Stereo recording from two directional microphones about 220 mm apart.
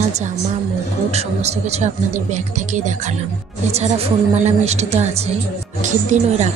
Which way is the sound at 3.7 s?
30° right (ahead or behind).